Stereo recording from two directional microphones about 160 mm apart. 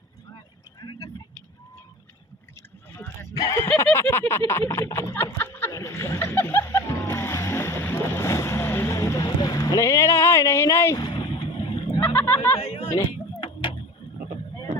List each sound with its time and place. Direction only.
0.8 s vehicle: 25° left (ahead or behind)
3.0 s horse: 20° left (ahead or behind)
3.7 s a sound: 10° left (ahead or behind); by 11.4 s 25° left (ahead or behind)
12.0 s a sound: 15° left (ahead or behind)
12.5 s speech: 35° left (ahead or behind)
13.4 s tick-tock: 30° left (ahead or behind)